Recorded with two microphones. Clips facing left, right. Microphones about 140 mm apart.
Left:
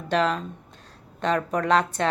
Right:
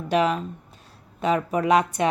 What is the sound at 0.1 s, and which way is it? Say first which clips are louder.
Speech: right 2 dB; 10° right (ahead or behind).